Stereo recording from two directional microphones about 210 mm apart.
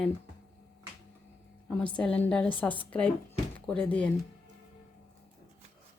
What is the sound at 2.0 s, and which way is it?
A woman's voice, 5° left (ahead or behind).